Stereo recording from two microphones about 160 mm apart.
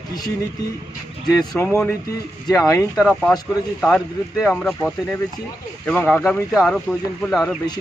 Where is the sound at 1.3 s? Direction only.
20° left (ahead or behind).